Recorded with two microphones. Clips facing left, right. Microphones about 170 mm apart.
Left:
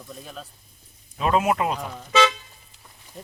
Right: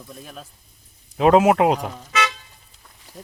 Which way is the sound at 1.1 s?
80° right.